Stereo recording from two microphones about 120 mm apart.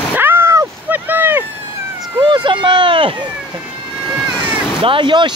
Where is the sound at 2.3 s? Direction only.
40° right (ahead or behind).